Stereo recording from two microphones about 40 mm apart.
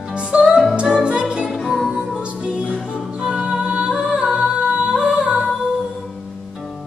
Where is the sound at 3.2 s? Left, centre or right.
Right.